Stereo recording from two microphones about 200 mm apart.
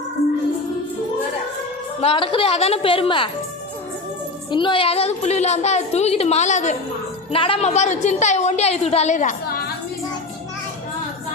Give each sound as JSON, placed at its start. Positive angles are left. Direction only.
{"t": 2.0, "sound": "a woman's voice", "side_deg": 30}
{"t": 4.5, "sound": "a woman's voice", "side_deg": 25}